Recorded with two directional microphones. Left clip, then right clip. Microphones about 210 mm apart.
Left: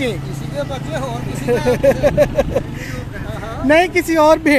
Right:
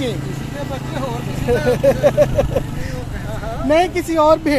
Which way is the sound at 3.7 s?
30° left (ahead or behind).